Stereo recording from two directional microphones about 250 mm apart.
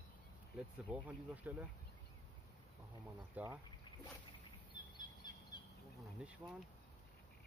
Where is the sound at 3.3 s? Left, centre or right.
Centre.